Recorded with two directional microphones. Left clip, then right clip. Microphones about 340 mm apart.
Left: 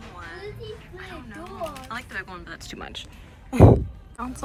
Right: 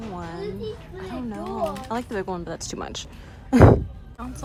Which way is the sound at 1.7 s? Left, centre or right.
Centre.